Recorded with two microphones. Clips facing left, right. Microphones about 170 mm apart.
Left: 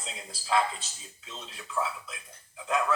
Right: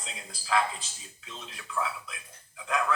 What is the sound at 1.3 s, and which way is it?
Speech, 25° left (ahead or behind).